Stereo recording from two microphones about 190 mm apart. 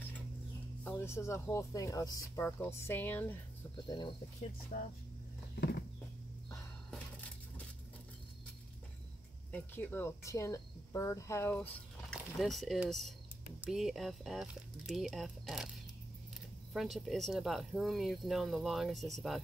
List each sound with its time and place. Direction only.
0.8 s speech: 15° left (ahead or behind)
3.8 s speech: 25° left (ahead or behind)
5.6 s a sound: 60° left (ahead or behind)
9.5 s speech: 10° left (ahead or behind)
16.7 s speech: centre (ahead or behind)